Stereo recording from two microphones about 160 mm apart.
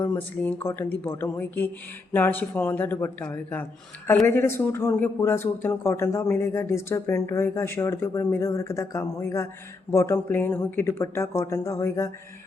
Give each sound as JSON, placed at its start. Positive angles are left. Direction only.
{"t": 0.0, "sound": "speech", "side_deg": 10}